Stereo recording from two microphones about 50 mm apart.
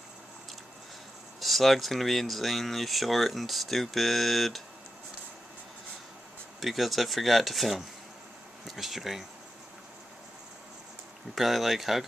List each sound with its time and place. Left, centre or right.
1.4 s speech: centre
6.6 s speech: centre
11.3 s speech: centre